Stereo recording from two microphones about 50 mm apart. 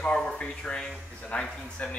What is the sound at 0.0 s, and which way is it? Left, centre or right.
Speech, centre.